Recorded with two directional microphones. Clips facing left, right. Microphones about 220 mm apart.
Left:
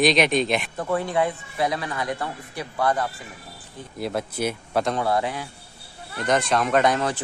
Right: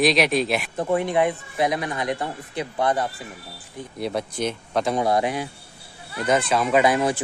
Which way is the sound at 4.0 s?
Centre (ahead or behind).